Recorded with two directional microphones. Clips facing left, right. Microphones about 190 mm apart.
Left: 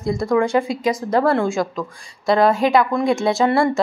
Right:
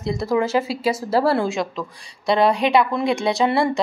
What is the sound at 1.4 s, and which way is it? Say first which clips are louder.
A woman's voice: left 2 dB; 20° right (ahead or behind).